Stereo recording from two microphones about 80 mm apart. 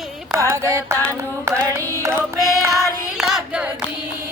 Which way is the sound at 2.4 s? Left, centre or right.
Left.